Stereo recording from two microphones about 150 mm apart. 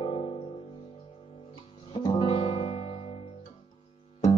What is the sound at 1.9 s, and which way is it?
Guitar, 40° left (ahead or behind).